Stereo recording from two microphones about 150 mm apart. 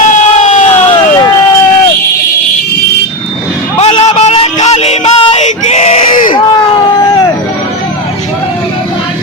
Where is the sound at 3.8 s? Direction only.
40° left (ahead or behind); by 6.3 s 55° left (ahead or behind).